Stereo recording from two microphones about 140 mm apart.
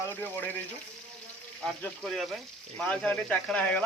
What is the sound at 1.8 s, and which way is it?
Speech, 5° left (ahead or behind).